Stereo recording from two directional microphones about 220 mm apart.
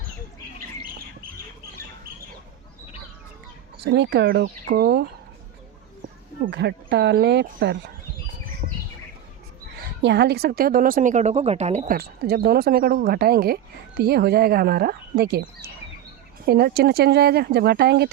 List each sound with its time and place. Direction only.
3.8 s a woman's voice: 55° right (ahead or behind)
6.4 s a woman's voice: 50° right (ahead or behind)
8.6 s bird: 35° right (ahead or behind)
10.0 s a woman's voice: 50° right (ahead or behind)
16.5 s a woman's voice: 45° right (ahead or behind)